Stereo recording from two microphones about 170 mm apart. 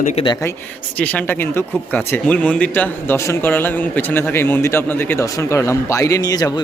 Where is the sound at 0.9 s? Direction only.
10° left (ahead or behind).